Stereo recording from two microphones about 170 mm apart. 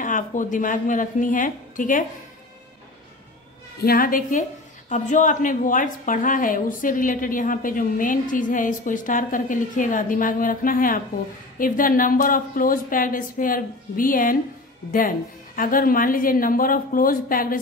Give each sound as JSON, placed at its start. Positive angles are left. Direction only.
{"t": 0.0, "sound": "a woman's voice", "side_deg": 50}
{"t": 3.8, "sound": "a woman's voice", "side_deg": 60}